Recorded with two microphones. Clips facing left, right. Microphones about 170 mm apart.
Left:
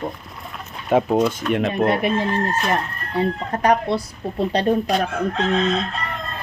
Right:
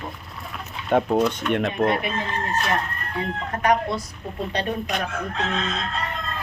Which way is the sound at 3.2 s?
35° left (ahead or behind).